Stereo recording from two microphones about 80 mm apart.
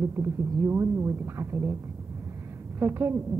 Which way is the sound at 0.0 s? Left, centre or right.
Right.